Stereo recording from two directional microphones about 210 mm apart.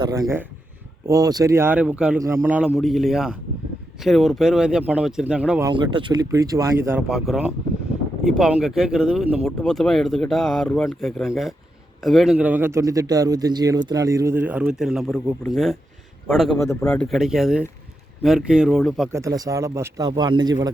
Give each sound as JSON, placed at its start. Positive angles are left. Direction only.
{"t": 0.0, "sound": "a man's voice", "side_deg": -15}
{"t": 5.6, "sound": "a man's voice", "side_deg": -25}
{"t": 19.1, "sound": "a man's voice", "side_deg": -15}